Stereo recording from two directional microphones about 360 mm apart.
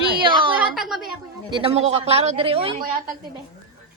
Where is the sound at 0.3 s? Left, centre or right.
Centre.